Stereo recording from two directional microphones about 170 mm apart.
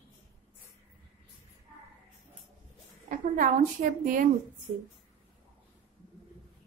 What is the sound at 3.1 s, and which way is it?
A woman's voice, 50° right (ahead or behind).